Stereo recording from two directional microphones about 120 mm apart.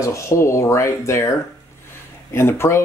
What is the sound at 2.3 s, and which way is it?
Speech, 20° left (ahead or behind).